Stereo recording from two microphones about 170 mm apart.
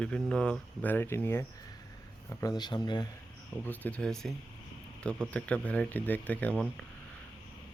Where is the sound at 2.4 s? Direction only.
25° left (ahead or behind).